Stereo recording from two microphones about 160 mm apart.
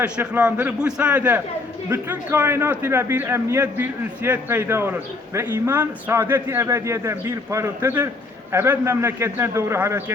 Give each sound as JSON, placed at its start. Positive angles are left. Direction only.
{"t": 0.0, "sound": "a man's voice", "side_deg": -10}